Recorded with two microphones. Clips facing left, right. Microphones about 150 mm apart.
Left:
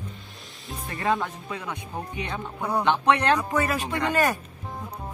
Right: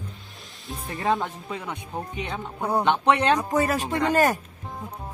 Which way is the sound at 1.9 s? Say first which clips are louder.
Right 1 dB; 15° right (ahead or behind).